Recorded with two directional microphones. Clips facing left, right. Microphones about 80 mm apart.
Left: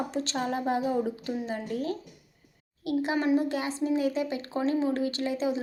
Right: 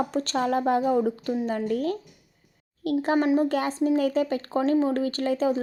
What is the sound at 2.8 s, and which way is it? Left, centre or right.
Speech, right.